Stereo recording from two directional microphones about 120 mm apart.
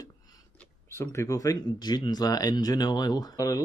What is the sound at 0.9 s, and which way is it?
Speech, 25° left (ahead or behind).